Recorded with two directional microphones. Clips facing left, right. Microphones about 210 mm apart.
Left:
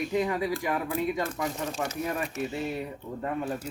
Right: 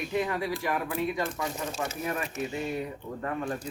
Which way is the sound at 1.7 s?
Centre (ahead or behind).